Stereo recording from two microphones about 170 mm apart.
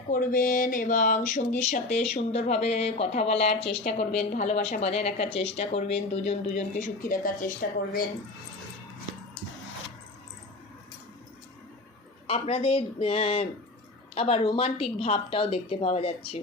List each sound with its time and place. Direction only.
0.1 s a woman's voice: 55° left (ahead or behind)
12.3 s a woman's voice: 35° left (ahead or behind)